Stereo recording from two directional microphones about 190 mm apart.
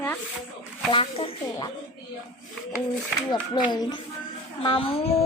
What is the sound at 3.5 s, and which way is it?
A woman's voice, 20° left (ahead or behind).